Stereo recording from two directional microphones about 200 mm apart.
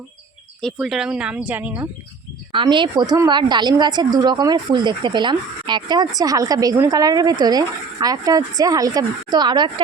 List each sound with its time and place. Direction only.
0.6 s speech: centre (ahead or behind)
2.5 s a woman's voice: 25° right (ahead or behind)